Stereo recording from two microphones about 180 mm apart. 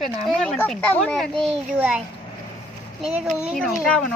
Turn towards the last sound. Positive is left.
turn(degrees=5)  # may be behind; listen again after turning